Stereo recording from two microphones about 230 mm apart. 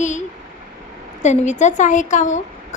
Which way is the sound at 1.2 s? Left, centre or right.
Left.